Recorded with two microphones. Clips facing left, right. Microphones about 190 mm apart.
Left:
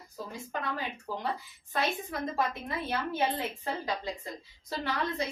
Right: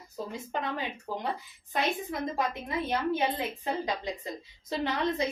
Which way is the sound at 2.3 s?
15° right (ahead or behind).